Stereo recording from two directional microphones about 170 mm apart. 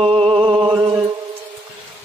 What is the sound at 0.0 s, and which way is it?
Music, 35° right (ahead or behind).